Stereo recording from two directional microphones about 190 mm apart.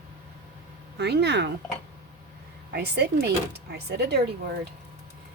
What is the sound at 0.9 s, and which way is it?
Speech, 60° right (ahead or behind).